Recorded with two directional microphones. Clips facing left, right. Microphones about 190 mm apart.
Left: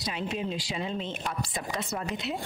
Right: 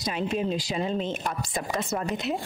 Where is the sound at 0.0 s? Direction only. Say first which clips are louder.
Right 5 dB; 45° right (ahead or behind).